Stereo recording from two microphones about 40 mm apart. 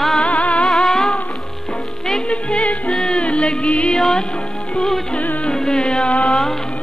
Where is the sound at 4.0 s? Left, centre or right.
Centre.